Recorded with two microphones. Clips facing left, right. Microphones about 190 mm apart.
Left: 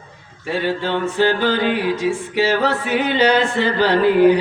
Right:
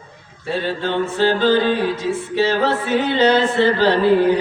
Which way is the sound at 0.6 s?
15° left (ahead or behind).